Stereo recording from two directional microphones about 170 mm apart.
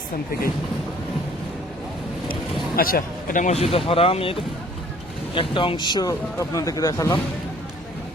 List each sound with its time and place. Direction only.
2.7 s a man's voice: 60° left (ahead or behind); by 7.2 s 20° left (ahead or behind)